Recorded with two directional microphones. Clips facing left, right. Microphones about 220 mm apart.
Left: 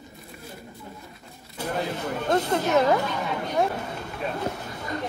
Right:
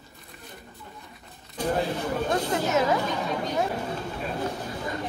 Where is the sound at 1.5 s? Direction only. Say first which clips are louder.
Right 3 dB; 10° left (ahead or behind).